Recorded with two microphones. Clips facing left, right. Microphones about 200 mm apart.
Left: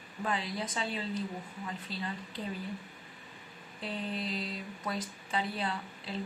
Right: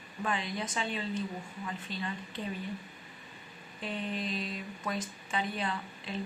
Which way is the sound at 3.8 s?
30° left (ahead or behind).